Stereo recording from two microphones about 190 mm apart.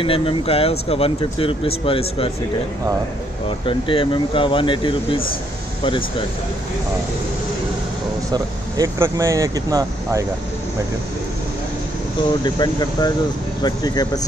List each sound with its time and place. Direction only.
0.0 s speech: 30° left (ahead or behind)
3.4 s speech: 25° left (ahead or behind)
8.3 s speech: 20° right (ahead or behind)
12.4 s speech: 25° left (ahead or behind)